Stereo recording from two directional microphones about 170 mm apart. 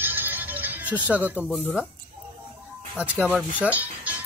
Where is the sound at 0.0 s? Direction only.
10° right (ahead or behind).